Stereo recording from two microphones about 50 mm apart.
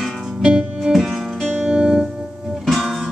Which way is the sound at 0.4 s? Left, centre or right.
Centre.